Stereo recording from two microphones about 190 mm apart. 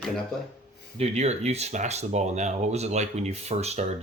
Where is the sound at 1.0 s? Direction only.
35° right (ahead or behind).